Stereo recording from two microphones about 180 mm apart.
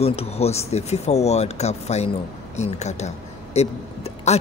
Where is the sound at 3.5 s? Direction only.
35° left (ahead or behind).